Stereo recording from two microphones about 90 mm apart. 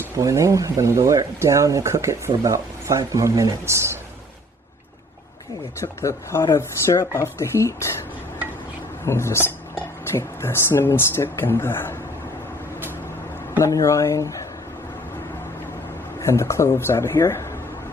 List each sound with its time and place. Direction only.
0.2 s speech: 35° right (ahead or behind)
5.8 s speech: 35° left (ahead or behind)
9.0 s speech: 30° left (ahead or behind)
13.6 s speech: 35° left (ahead or behind)
16.2 s speech: 30° left (ahead or behind)